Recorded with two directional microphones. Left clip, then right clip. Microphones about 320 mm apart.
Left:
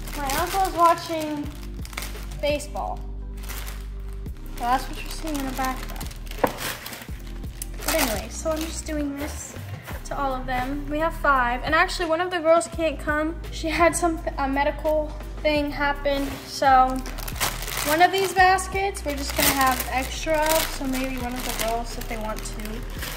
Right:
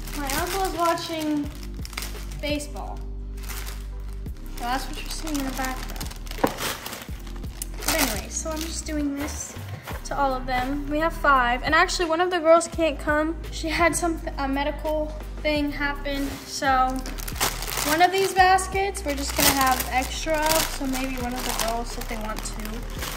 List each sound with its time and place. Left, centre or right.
0.1 s speech: centre
2.4 s a woman's voice: centre
4.6 s speech: centre
7.8 s speech: centre
10.0 s a woman's voice: centre
17.3 s speech: centre
22.3 s speech: right